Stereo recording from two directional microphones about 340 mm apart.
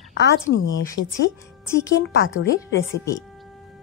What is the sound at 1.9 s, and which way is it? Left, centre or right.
Speech, left.